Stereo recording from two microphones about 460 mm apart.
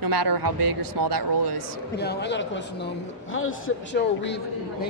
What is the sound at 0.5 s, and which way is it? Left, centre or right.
Speech, right.